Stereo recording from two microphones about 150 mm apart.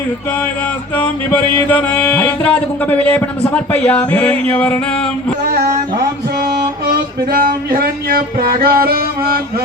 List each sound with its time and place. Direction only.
1.5 s speech: 15° left (ahead or behind)
7.3 s music: 75° right (ahead or behind)